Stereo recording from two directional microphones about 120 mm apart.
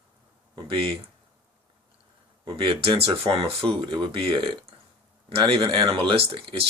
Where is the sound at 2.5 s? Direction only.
50° right (ahead or behind).